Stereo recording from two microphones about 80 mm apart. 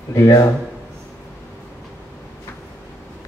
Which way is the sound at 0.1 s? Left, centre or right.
Left.